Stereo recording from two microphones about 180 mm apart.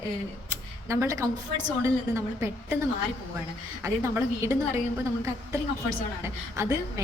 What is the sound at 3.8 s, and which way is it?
A woman's voice, 15° right (ahead or behind).